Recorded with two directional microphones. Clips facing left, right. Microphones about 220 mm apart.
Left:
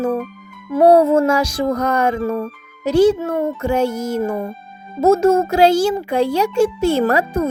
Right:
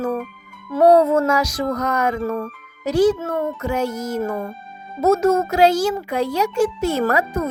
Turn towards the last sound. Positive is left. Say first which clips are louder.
# left 3 dB
turn(degrees=30)  # may be behind; listen again after turning